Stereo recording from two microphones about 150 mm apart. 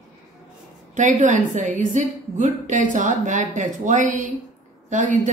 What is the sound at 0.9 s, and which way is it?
A woman's voice, 55° right (ahead or behind).